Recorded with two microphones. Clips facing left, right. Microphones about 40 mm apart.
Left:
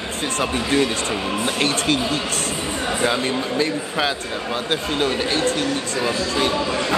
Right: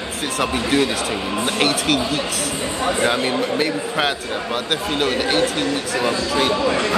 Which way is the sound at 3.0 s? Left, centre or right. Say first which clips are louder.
Even; right.